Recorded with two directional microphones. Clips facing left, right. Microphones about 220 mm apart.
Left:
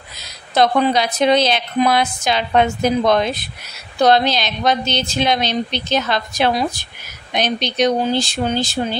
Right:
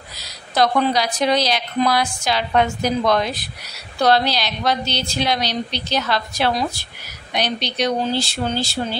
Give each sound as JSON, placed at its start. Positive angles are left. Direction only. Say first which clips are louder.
{"t": 0.6, "sound": "a woman's voice", "louder": "left 3 dB", "side_deg": 20}